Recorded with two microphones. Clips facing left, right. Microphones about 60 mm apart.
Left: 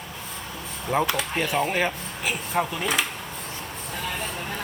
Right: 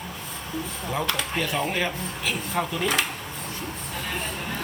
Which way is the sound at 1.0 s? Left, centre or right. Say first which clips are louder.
Right 1 dB; centre.